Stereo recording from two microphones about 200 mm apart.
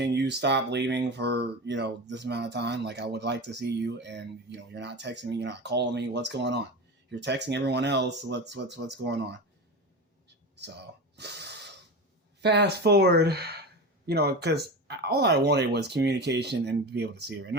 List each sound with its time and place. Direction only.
0.0 s speech: 60° right (ahead or behind)
11.2 s snort: 55° right (ahead or behind)
12.4 s speech: 55° right (ahead or behind)